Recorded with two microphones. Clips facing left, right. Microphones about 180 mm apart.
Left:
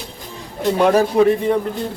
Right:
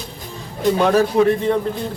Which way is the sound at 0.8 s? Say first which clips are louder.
Left 2 dB; 15° left (ahead or behind).